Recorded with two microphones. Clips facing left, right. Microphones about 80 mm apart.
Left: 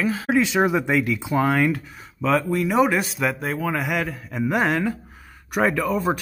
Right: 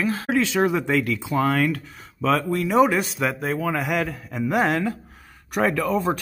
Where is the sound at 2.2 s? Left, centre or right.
Centre.